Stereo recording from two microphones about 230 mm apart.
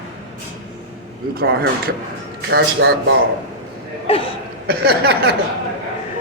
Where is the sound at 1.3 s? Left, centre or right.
Right.